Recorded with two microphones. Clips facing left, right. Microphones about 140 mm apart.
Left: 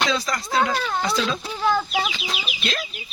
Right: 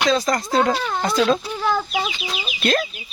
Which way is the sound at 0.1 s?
45° right (ahead or behind).